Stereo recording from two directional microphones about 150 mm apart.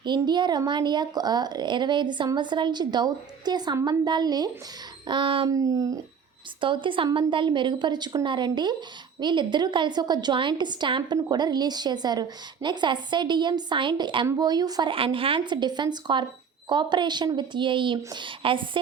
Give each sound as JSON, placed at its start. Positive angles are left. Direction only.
{"t": 0.0, "sound": "speech", "side_deg": -30}
{"t": 5.5, "sound": "speech", "side_deg": -25}
{"t": 6.6, "sound": "speech", "side_deg": -35}